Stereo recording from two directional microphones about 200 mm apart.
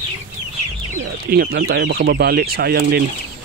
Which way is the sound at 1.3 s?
50° right (ahead or behind).